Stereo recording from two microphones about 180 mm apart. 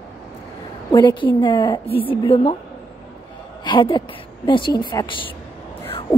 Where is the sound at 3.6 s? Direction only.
25° left (ahead or behind).